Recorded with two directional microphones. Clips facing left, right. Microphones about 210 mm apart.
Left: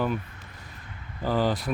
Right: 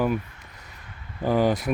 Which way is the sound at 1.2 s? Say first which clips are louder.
Right 4 dB; 15° right (ahead or behind).